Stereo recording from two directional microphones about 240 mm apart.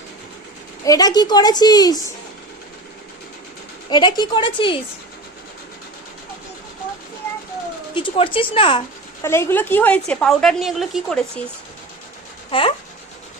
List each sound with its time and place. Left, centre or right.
0.9 s a woman's voice: centre
3.8 s a woman's voice: centre
7.9 s a woman's voice: left
9.2 s a woman's voice: centre
12.5 s speech: left